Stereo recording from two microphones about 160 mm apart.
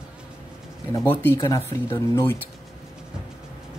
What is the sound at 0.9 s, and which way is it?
Speech, 15° left (ahead or behind).